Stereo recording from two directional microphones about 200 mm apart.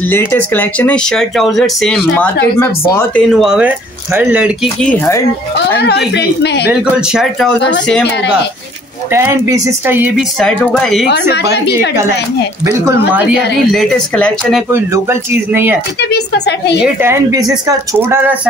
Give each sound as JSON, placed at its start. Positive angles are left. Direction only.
{"t": 0.1, "sound": "speech", "side_deg": 10}
{"t": 4.7, "sound": "speech", "side_deg": 10}
{"t": 5.8, "sound": "a woman's voice", "side_deg": 55}
{"t": 6.7, "sound": "speech", "side_deg": -5}
{"t": 9.1, "sound": "speech", "side_deg": -15}
{"t": 10.4, "sound": "speech", "side_deg": 5}
{"t": 11.1, "sound": "a woman's voice", "side_deg": 55}
{"t": 13.7, "sound": "speech", "side_deg": 5}
{"t": 14.7, "sound": "speech", "side_deg": -10}
{"t": 16.0, "sound": "a woman's voice", "side_deg": 55}
{"t": 16.8, "sound": "speech", "side_deg": -10}